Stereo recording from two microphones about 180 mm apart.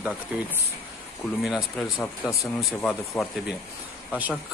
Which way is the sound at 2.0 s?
15° left (ahead or behind).